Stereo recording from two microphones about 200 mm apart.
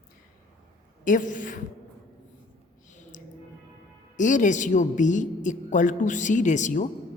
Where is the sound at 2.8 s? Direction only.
40° left (ahead or behind).